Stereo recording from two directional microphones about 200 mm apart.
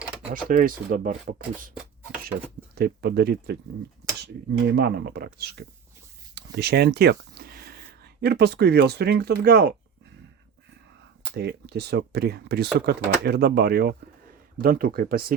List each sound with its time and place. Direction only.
0.1 s typing: 5° right (ahead or behind)
0.4 s speech: 45° right (ahead or behind)
2.7 s speech: 50° right (ahead or behind)
4.7 s speech: 55° right (ahead or behind)
11.3 s speech: 55° right (ahead or behind)